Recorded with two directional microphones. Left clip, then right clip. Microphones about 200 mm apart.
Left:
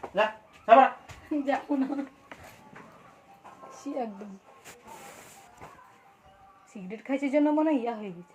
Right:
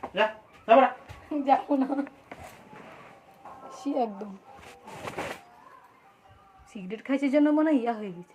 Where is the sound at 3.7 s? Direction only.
25° right (ahead or behind).